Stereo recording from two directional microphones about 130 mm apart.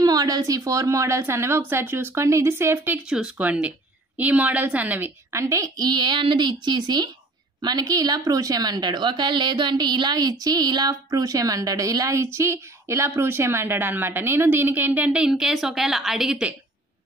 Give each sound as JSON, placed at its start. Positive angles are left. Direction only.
{"t": 0.0, "sound": "a woman's voice", "side_deg": -30}
{"t": 3.1, "sound": "a woman's voice", "side_deg": -5}